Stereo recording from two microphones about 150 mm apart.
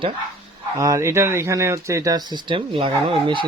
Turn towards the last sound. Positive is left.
turn(degrees=-35)  # may be behind; listen again after turning